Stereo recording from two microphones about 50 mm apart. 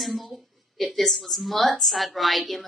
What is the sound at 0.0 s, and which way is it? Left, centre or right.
Speech, centre.